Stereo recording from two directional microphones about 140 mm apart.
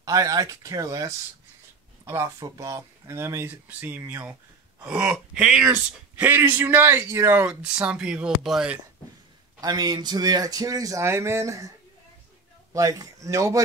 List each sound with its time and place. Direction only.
0.0 s speech: 25° right (ahead or behind); by 8.7 s 5° right (ahead or behind)
9.6 s speech: 30° right (ahead or behind)
12.7 s speech: 25° right (ahead or behind)